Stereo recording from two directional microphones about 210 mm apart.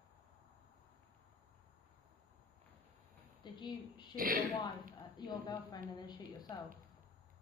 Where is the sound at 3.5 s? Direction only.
20° left (ahead or behind).